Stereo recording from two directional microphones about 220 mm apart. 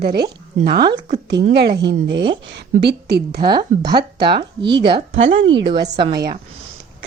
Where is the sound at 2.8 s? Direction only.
50° right (ahead or behind).